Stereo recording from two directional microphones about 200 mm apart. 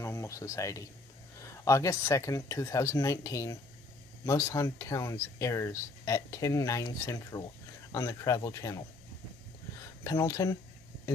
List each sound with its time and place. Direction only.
0.0 s speech: 15° left (ahead or behind)